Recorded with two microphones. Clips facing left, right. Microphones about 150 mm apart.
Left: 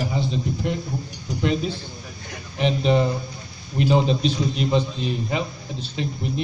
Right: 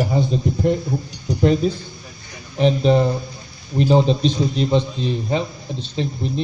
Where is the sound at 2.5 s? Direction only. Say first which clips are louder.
Right 4 dB; 35° right (ahead or behind).